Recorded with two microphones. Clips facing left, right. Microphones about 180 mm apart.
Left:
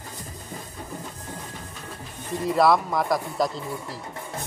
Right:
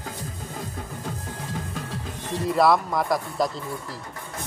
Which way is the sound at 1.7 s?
90° right.